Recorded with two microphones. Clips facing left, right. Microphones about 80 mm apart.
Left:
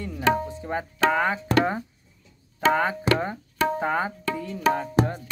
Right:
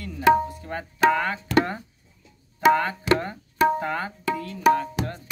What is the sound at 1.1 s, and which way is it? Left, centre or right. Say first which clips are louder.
Speech: even; centre.